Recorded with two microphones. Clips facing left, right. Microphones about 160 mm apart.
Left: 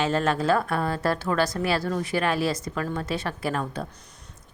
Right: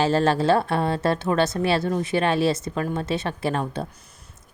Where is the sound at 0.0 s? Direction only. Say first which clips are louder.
Right 4 dB; 30° right (ahead or behind).